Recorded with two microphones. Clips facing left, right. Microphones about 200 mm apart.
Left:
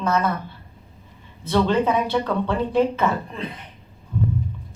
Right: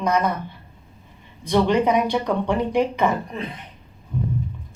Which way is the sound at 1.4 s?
15° right (ahead or behind).